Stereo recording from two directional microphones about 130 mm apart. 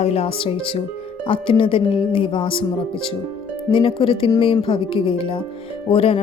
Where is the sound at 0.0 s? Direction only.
55° left (ahead or behind).